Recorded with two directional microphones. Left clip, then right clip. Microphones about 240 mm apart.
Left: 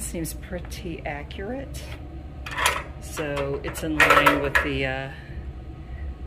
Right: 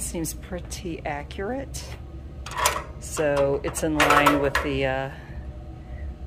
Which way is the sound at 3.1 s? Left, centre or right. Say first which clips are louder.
Right 6 dB; centre.